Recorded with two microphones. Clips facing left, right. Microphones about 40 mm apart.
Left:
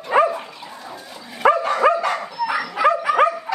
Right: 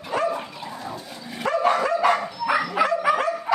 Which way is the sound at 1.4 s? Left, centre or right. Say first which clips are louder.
Left 8 dB; left.